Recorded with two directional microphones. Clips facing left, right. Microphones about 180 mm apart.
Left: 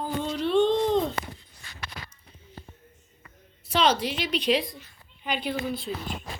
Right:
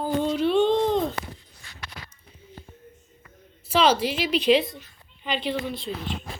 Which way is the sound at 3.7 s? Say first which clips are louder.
Right 3 dB; 5° right (ahead or behind).